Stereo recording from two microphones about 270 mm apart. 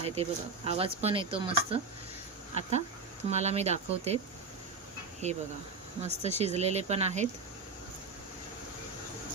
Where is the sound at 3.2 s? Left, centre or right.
Right.